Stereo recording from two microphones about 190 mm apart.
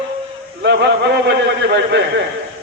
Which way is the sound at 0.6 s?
60° right (ahead or behind).